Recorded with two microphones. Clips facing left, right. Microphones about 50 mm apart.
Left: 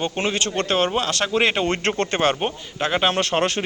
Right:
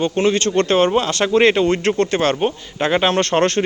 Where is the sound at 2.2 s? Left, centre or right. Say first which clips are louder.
Right 3 dB; centre.